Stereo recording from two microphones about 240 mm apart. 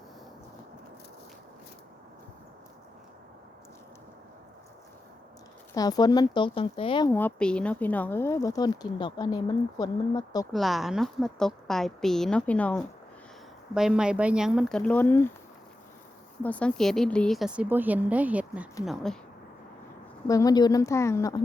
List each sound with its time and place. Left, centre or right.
5.7 s speech: centre
7.1 s speech: centre
10.5 s a woman's voice: centre
16.4 s a woman's voice: centre
20.2 s speech: centre